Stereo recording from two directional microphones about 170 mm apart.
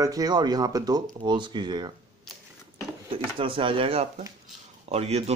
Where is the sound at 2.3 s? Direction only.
Centre (ahead or behind).